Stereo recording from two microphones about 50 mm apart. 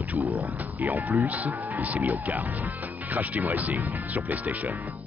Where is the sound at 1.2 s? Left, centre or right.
Right.